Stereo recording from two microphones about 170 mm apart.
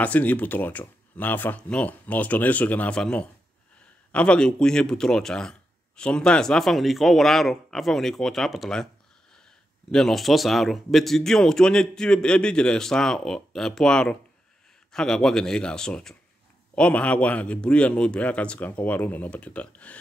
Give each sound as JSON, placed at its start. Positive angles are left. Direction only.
{"t": 0.0, "sound": "speech", "side_deg": 10}
{"t": 9.8, "sound": "speech", "side_deg": 5}